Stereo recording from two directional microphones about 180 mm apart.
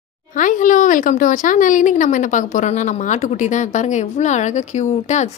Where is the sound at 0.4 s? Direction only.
45° left (ahead or behind).